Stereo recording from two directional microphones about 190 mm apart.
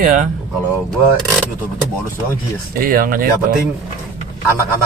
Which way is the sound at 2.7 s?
50° right (ahead or behind).